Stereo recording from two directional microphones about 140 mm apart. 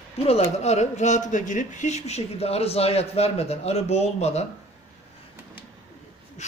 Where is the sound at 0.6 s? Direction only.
55° left (ahead or behind).